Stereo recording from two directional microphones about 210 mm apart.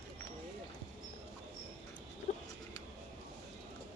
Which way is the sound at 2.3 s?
35° left (ahead or behind).